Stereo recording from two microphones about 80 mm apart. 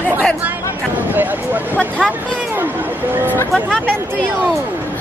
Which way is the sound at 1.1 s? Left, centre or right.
Right.